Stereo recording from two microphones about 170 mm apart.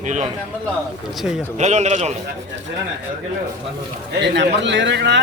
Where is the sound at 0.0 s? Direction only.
45° right (ahead or behind).